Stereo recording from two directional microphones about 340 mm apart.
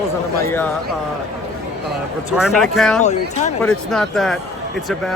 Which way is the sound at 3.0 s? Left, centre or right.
Left.